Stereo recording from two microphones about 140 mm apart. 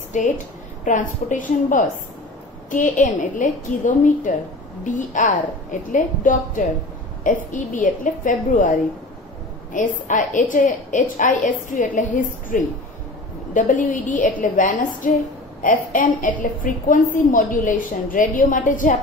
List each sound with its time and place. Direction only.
0.1 s a woman's voice: 60° left (ahead or behind)